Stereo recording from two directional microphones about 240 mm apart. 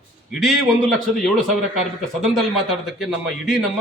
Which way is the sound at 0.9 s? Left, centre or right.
Centre.